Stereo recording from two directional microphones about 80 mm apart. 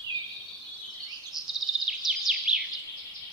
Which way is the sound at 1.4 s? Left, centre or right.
Centre.